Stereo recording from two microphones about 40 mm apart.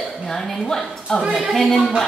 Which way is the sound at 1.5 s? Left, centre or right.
Centre.